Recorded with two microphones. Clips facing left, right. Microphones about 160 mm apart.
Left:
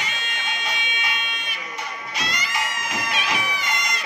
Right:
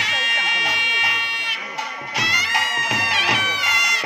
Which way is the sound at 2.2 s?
70° right (ahead or behind).